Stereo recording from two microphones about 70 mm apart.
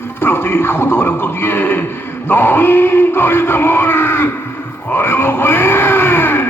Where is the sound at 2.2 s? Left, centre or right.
Left.